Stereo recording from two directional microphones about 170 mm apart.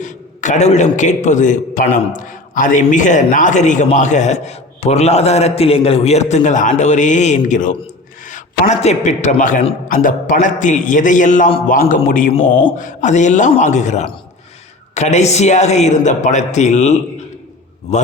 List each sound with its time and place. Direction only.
0.0 s a man's voice: 45° left (ahead or behind)
12.3 s a man's voice: 30° left (ahead or behind)
12.7 s a man's voice: 50° left (ahead or behind)